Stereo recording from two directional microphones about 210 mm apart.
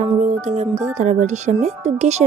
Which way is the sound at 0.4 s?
35° right (ahead or behind).